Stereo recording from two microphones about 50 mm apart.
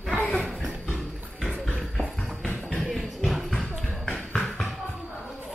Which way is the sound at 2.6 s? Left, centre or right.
Right.